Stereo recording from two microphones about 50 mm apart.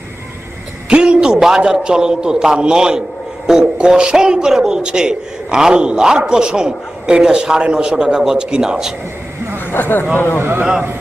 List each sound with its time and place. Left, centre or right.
0.9 s a man's voice: centre
9.7 s speech: left
10.6 s a man's voice: right